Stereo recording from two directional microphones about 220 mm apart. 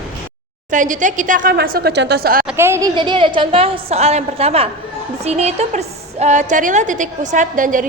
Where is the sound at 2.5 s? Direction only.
10° right (ahead or behind).